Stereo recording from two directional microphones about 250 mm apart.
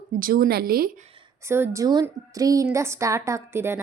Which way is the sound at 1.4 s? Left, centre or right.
Centre.